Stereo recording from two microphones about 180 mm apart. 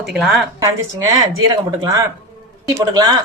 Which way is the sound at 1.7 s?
20° right (ahead or behind).